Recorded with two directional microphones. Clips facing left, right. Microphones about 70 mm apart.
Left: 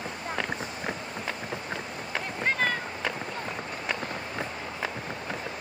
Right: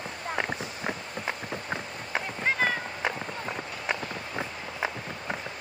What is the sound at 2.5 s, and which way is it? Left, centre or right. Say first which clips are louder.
Run: right 1 dB; centre.